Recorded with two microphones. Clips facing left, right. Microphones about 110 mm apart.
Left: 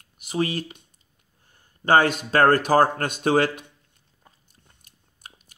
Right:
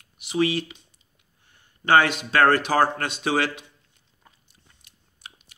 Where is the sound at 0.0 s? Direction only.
40° left (ahead or behind).